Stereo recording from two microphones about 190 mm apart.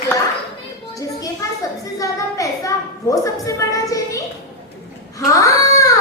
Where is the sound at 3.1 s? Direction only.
15° left (ahead or behind).